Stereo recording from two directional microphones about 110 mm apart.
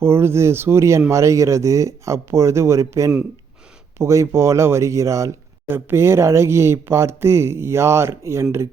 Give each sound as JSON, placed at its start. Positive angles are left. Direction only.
{"t": 0.0, "sound": "speech", "side_deg": -20}